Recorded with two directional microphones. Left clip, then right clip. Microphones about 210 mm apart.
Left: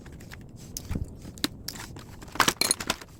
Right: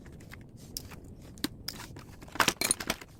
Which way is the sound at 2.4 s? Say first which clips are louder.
Left 4 dB; 10° right (ahead or behind).